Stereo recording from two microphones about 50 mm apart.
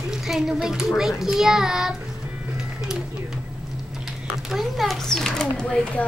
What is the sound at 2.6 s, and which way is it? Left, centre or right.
Music, centre.